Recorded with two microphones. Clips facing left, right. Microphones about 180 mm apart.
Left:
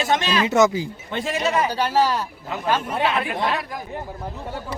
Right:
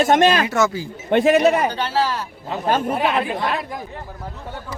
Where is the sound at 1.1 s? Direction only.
60° right (ahead or behind).